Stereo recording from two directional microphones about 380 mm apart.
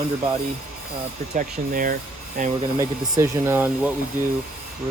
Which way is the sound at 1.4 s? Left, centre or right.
Right.